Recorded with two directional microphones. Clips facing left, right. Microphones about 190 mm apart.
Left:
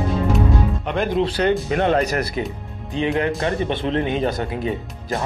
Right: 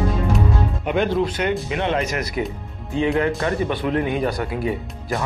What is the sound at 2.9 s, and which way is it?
Speech, 20° left (ahead or behind).